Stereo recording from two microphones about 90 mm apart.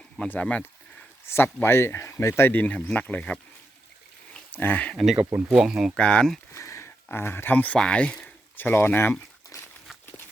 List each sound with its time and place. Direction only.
0.2 s speech: 15° left (ahead or behind)
1.6 s speech: 30° left (ahead or behind); by 3.4 s 15° left (ahead or behind)
4.5 s speech: 20° left (ahead or behind)
5.1 s speech: 15° right (ahead or behind)
6.0 s speech: 10° left (ahead or behind)
6.5 s speech: 35° left (ahead or behind); by 8.3 s 10° left (ahead or behind)
8.5 s speech: 25° left (ahead or behind)
9.5 s a sound: 40° left (ahead or behind)